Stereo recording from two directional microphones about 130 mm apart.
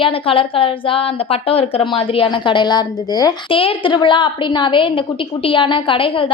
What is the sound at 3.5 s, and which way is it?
A woman's voice, 45° left (ahead or behind).